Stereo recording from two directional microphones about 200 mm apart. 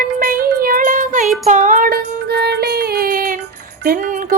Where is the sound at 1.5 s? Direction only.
35° right (ahead or behind).